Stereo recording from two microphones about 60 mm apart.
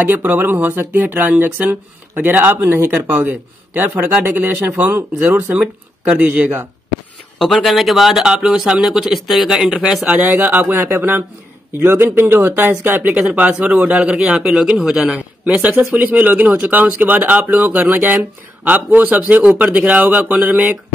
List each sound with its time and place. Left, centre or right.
0.0 s speech: right
7.3 s speech: centre
10.0 s speech: right
13.0 s speech: right
15.1 s speech: right